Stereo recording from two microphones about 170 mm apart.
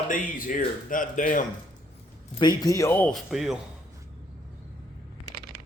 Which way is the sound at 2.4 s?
25° left (ahead or behind).